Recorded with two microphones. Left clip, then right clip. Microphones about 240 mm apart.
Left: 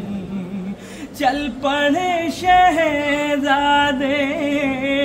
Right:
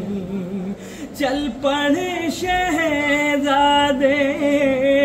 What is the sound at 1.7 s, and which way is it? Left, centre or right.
Music, centre.